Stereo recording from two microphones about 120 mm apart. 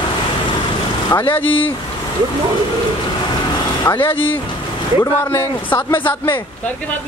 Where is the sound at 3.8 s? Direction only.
20° left (ahead or behind).